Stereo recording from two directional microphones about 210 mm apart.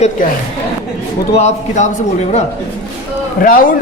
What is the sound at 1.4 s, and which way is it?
Speech, 35° left (ahead or behind).